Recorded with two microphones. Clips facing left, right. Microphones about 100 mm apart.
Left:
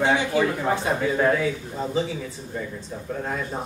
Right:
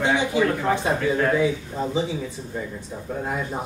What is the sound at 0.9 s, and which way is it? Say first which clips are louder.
Speech: even; 10° left (ahead or behind).